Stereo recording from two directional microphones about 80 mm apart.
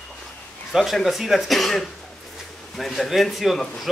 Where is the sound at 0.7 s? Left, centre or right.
Centre.